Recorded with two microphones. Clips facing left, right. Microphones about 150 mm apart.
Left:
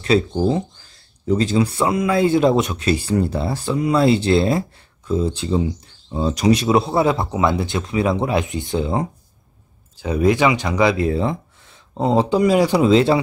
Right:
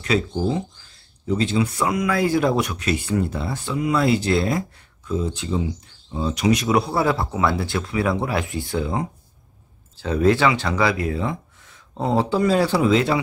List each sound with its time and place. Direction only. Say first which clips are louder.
0.0 s speech: left 5 dB; 35° left (ahead or behind)
9.9 s speech: left 1 dB; 15° left (ahead or behind)
12.8 s speech: left 4 dB; 30° left (ahead or behind)